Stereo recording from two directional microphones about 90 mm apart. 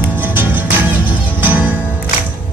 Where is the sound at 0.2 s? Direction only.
20° right (ahead or behind).